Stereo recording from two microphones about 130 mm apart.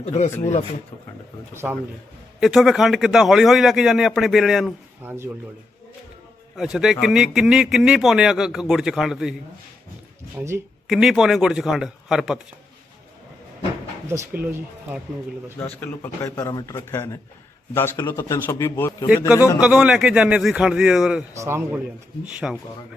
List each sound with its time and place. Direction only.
0.0 s speech: 65° left (ahead or behind)
2.4 s speech: centre (ahead or behind)
5.0 s a man's voice: 20° right (ahead or behind)
6.6 s speech: 5° right (ahead or behind)
10.8 s speech: centre (ahead or behind)
14.1 s speech: 20° right (ahead or behind)
14.4 s a man's voice: 10° right (ahead or behind)
16.2 s speech: 25° left (ahead or behind)
19.5 s a man's voice: 10° right (ahead or behind)
21.3 s speech: 20° right (ahead or behind)
22.2 s speech: 5° right (ahead or behind)